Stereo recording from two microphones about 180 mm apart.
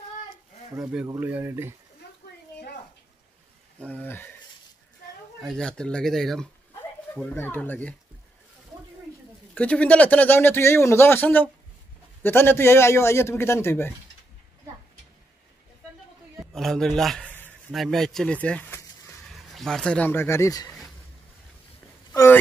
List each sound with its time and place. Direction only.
1.0 s speech: 15° right (ahead or behind)
2.0 s a sound: 70° left (ahead or behind)
3.8 s a man's voice: 10° left (ahead or behind)
5.4 s a man's voice: 5° left (ahead or behind)
9.5 s a man's voice: 5° left (ahead or behind)
16.5 s a man's voice: centre (ahead or behind)
19.3 s speech: centre (ahead or behind); by 20.6 s 15° left (ahead or behind)
22.1 s a sound: 15° left (ahead or behind)